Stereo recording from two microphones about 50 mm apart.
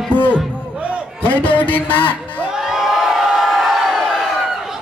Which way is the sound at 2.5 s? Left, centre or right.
Centre.